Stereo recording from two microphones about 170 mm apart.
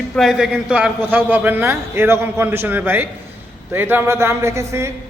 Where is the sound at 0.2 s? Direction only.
Centre (ahead or behind).